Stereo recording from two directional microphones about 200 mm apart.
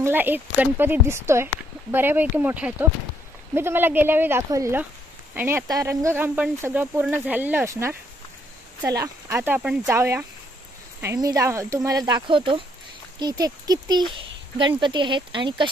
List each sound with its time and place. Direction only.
0.0 s speech: 10° right (ahead or behind)